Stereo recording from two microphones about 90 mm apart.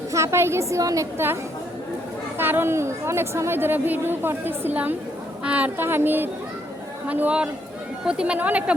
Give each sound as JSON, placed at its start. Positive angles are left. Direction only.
{"t": 0.1, "sound": "a woman's voice", "side_deg": -30}
{"t": 2.4, "sound": "a woman's voice", "side_deg": -25}